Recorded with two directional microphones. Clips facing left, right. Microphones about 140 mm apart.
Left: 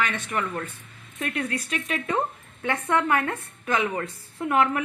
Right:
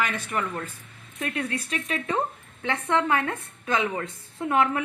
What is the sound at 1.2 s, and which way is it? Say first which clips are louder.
A woman's voice: left 1 dB; 25° right (ahead or behind).